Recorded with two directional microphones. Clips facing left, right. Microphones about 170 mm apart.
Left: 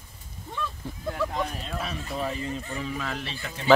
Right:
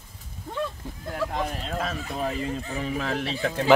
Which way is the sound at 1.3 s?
50° right (ahead or behind).